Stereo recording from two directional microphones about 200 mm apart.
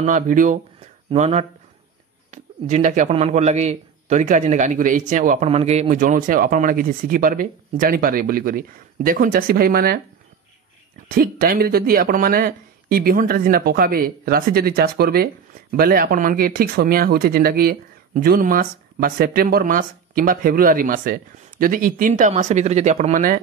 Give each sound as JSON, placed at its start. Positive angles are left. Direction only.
{"t": 0.0, "sound": "speech", "side_deg": -40}
{"t": 11.1, "sound": "speech", "side_deg": -50}